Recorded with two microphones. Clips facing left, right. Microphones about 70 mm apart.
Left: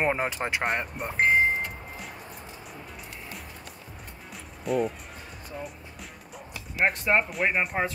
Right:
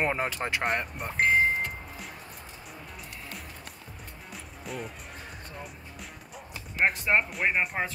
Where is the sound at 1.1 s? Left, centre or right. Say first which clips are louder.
Left 1 dB; left.